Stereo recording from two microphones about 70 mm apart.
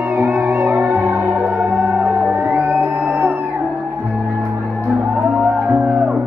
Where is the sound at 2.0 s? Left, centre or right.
Centre.